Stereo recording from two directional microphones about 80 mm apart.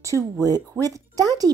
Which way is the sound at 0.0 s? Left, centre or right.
Right.